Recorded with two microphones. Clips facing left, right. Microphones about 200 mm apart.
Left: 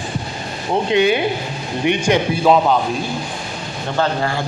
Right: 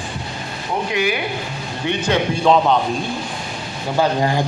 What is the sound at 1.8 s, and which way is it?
Speech, 15° left (ahead or behind).